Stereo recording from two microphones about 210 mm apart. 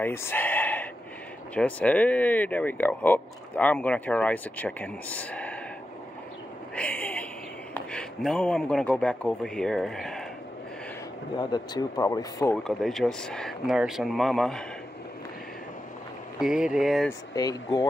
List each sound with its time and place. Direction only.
0.0 s a sound: 10° left (ahead or behind)
1.5 s speech: 5° left (ahead or behind)
6.7 s a sound: 5° left (ahead or behind)
7.7 s a man's voice: 5° left (ahead or behind)
11.3 s speech: 20° left (ahead or behind)
12.6 s speech: centre (ahead or behind)
16.3 s speech: 5° right (ahead or behind)
17.4 s speech: 20° left (ahead or behind)